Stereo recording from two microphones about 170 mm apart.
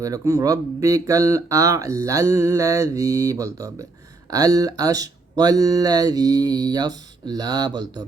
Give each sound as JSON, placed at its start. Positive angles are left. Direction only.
{"t": 0.0, "sound": "speech", "side_deg": -20}